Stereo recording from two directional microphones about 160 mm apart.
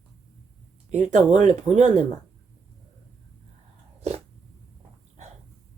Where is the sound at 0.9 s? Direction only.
45° right (ahead or behind).